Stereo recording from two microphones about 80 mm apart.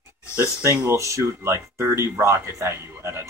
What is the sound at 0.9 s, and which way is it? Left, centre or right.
Speech, right.